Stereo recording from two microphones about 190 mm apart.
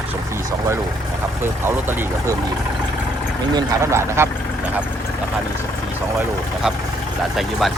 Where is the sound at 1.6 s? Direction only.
10° right (ahead or behind).